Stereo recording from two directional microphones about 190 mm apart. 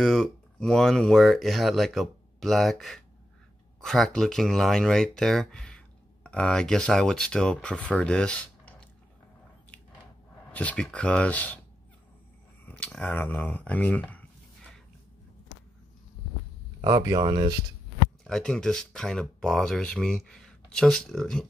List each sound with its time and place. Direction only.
0.0 s speech: 5° left (ahead or behind)
10.5 s speech: 5° left (ahead or behind)
12.6 s speech: 5° left (ahead or behind)
16.8 s speech: 20° right (ahead or behind)
18.2 s speech: 5° left (ahead or behind)